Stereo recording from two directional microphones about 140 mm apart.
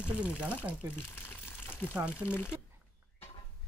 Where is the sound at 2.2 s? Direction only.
15° left (ahead or behind).